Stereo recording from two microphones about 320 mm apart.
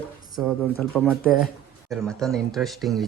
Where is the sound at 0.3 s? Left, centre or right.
Centre.